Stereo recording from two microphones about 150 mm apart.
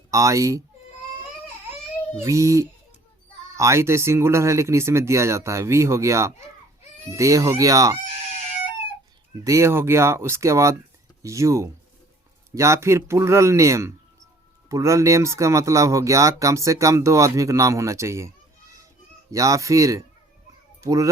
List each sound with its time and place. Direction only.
0.1 s speech: 20° right (ahead or behind)
2.2 s speech: 20° right (ahead or behind)
9.4 s speech: 20° right (ahead or behind)
19.3 s speech: 20° right (ahead or behind)